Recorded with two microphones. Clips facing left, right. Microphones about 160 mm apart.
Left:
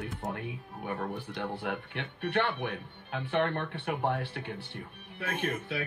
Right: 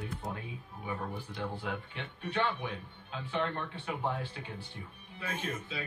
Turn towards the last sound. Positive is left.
turn(degrees=65)  # may be behind; listen again after turning